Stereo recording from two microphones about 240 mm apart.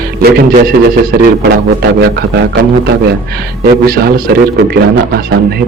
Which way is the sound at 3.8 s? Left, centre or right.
Right.